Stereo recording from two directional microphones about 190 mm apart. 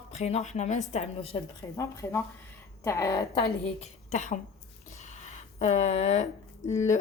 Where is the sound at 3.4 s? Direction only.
35° left (ahead or behind).